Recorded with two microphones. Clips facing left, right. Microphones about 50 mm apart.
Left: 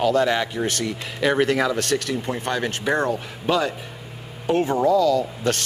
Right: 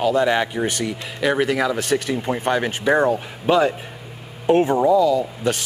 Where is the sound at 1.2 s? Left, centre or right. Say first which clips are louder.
Even; centre.